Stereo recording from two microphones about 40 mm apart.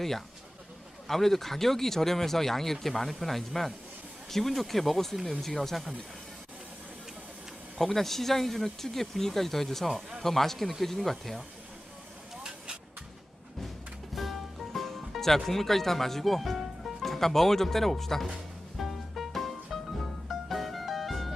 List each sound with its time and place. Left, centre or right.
1.0 s speech: centre
7.9 s speech: centre
12.4 s vehicle: centre
14.2 s music: centre
15.4 s speech: centre
18.8 s music: centre